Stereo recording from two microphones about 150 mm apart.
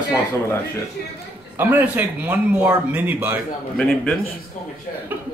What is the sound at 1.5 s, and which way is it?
Speech, 10° right (ahead or behind).